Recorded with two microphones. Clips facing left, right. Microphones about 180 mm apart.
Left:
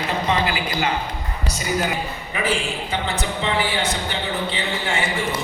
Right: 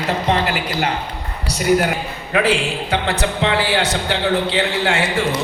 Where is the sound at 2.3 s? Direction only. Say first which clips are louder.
Right 6 dB; 75° right (ahead or behind).